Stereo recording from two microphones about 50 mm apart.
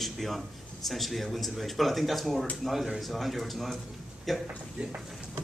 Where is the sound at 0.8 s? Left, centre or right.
Centre.